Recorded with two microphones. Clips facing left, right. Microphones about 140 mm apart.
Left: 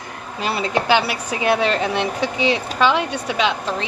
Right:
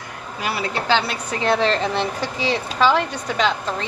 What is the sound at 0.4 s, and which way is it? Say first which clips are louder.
Speech: left 4 dB; 25° left (ahead or behind).